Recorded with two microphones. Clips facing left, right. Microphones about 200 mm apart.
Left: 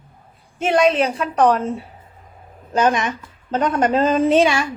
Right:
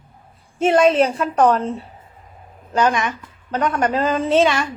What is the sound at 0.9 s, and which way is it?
Speech, 30° right (ahead or behind).